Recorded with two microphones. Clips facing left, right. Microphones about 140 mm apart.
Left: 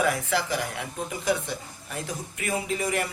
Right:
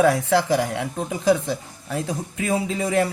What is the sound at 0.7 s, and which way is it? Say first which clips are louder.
Speech: right 6 dB; 70° right (ahead or behind).